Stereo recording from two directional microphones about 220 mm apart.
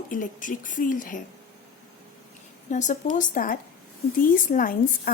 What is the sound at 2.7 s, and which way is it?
A woman's voice, 35° left (ahead or behind).